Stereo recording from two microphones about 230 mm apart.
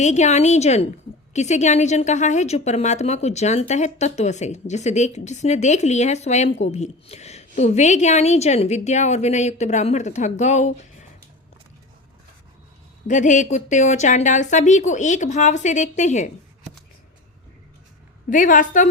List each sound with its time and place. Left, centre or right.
0.0 s a woman's voice: left
13.1 s a woman's voice: left
18.3 s a woman's voice: left